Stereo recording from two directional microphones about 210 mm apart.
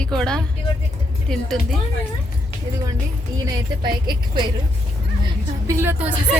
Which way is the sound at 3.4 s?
20° right (ahead or behind).